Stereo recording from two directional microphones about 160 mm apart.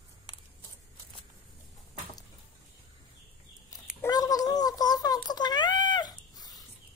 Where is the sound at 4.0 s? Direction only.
20° left (ahead or behind).